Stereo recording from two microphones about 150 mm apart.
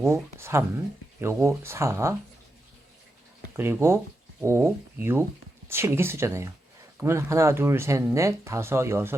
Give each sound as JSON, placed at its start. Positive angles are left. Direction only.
{"t": 0.0, "sound": "speech", "side_deg": -20}
{"t": 3.5, "sound": "speech", "side_deg": -15}